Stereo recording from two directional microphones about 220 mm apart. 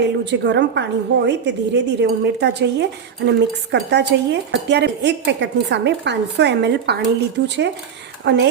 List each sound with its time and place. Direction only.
0.0 s speech: 50° right (ahead or behind)